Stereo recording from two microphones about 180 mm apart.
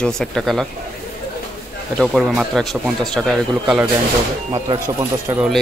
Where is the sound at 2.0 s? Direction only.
Centre (ahead or behind).